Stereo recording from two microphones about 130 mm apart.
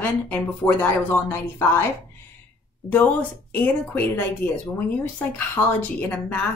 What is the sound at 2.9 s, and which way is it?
A woman's voice, 15° left (ahead or behind).